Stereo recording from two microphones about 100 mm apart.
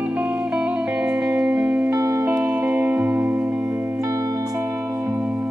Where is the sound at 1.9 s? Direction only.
30° right (ahead or behind).